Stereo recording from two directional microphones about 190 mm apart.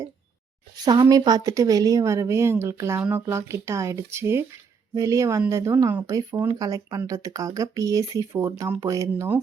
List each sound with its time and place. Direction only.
0.9 s speech: 20° right (ahead or behind)